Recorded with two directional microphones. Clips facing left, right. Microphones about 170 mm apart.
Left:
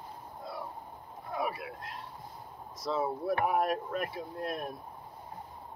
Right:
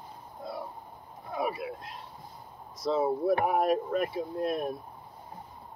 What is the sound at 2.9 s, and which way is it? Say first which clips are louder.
Speech: right 5 dB; 25° right (ahead or behind).